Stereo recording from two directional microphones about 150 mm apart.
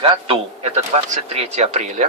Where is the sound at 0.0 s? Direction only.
40° right (ahead or behind).